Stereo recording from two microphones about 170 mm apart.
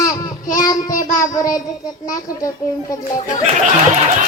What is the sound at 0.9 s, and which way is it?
Child singing, 50° left (ahead or behind).